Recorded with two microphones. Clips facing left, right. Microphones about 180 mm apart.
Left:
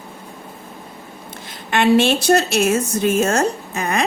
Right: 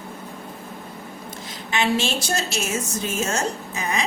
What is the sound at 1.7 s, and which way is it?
A woman's voice, 60° left (ahead or behind).